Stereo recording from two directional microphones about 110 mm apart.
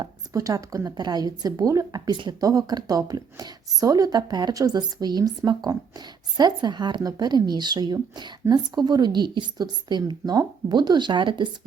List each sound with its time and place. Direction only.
0.3 s a woman's voice: 30° right (ahead or behind)